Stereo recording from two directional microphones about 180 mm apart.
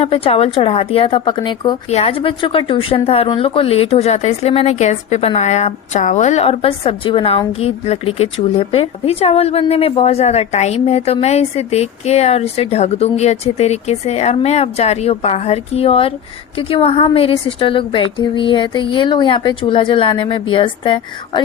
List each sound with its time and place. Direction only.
0.0 s a woman's voice: 35° left (ahead or behind)